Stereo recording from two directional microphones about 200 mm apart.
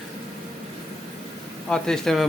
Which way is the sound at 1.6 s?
5° left (ahead or behind).